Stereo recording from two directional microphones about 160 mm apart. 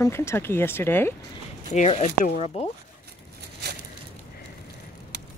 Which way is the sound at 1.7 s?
45° left (ahead or behind).